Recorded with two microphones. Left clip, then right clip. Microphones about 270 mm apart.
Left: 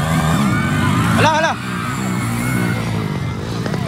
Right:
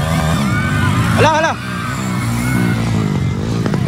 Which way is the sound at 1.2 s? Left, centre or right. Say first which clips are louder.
Right 3 dB; centre.